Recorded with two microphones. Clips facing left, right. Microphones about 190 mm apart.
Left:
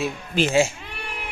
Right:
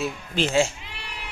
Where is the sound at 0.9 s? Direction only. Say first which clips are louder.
Left 5 dB; 55° left (ahead or behind).